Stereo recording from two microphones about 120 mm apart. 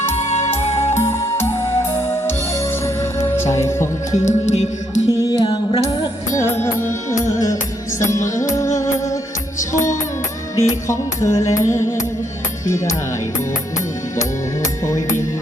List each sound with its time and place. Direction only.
0.3 s music: 65° left (ahead or behind)
0.9 s music: 20° left (ahead or behind)
2.8 s music: 25° left (ahead or behind)
4.1 s music: 85° left
5.2 s music: 35° left (ahead or behind)
9.7 s music: 90° left
10.8 s music: 25° left (ahead or behind)
14.2 s music: 25° left (ahead or behind)